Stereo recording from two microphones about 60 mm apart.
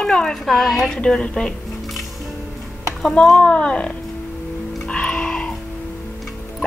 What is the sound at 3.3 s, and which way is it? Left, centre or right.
Speech, centre.